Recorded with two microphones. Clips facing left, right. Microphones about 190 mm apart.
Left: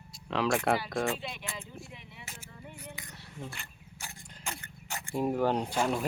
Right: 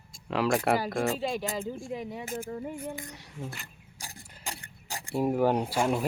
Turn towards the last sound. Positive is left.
turn(degrees=-10)  # may be behind; listen again after turning